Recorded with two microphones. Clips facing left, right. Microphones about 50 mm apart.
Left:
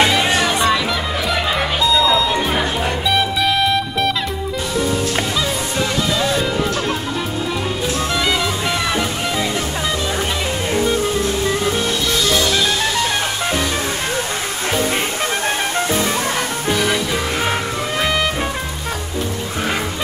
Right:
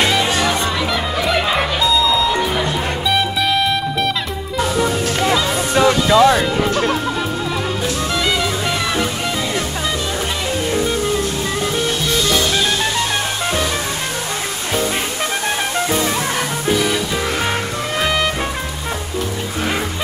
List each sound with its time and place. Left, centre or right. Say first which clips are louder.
1.2 s music: right 3 dB; centre
5.3 s music: right 4 dB; right
8.3 s music: even; centre
18.0 s music: right 1 dB; centre